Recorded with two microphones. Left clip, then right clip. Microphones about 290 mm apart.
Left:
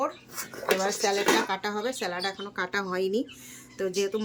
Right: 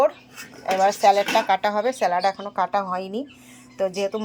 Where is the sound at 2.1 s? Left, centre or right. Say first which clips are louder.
Right 10 dB; right.